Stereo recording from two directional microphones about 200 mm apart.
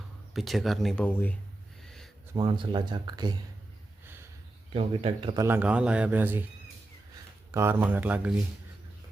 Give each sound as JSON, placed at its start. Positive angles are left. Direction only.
{"t": 0.3, "sound": "speech", "side_deg": 0}
{"t": 1.8, "sound": "a sound", "side_deg": 0}
{"t": 2.3, "sound": "speech", "side_deg": -20}
{"t": 4.0, "sound": "a sound", "side_deg": -10}
{"t": 4.7, "sound": "speech", "side_deg": -30}
{"t": 5.5, "sound": "speech", "side_deg": -5}
{"t": 7.5, "sound": "speech", "side_deg": -10}